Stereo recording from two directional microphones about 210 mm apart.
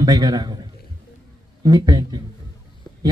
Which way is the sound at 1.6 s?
20° right (ahead or behind).